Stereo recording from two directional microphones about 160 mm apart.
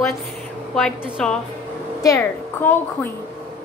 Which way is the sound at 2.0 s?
20° left (ahead or behind).